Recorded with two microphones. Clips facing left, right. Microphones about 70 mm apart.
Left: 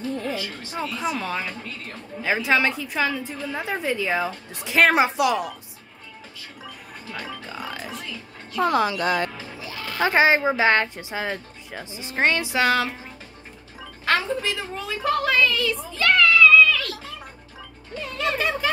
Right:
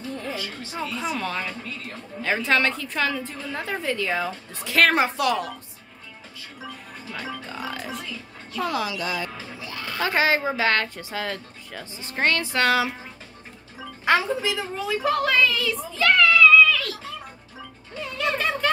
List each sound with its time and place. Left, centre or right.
0.7 s a woman's voice: centre
7.1 s speech: centre
8.5 s speech: left
9.9 s speech: left; by 12.8 s centre
14.0 s a woman's voice: centre
18.1 s music: centre